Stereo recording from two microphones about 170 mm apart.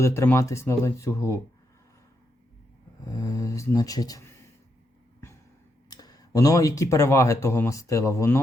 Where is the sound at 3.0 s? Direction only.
20° left (ahead or behind).